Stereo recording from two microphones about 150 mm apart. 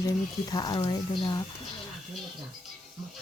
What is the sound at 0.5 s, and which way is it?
Speech, 30° left (ahead or behind).